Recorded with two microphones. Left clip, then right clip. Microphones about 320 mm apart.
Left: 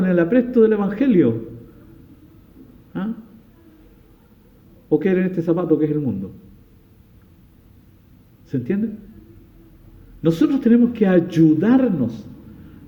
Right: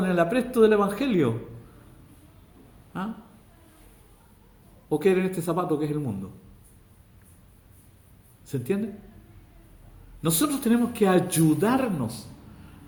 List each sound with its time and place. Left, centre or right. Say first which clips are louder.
0.0 s a man's voice: left 6 dB; centre
4.9 s a man's voice: left 4 dB; centre
8.5 s a man's voice: left 4 dB; centre
10.2 s a man's voice: left 8 dB; centre